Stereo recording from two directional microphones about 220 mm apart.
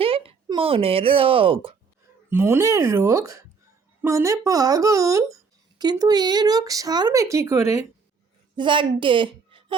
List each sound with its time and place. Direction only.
0.0 s speech: 25° right (ahead or behind)
2.3 s a woman's voice: 10° right (ahead or behind)